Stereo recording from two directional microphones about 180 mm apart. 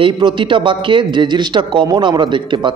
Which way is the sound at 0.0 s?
25° right (ahead or behind).